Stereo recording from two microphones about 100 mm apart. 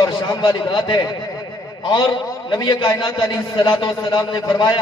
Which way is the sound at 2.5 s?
50° left (ahead or behind).